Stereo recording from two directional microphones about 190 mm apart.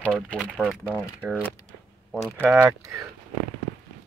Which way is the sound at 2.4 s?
10° right (ahead or behind).